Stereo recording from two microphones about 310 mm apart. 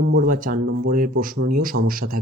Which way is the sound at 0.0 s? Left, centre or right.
Right.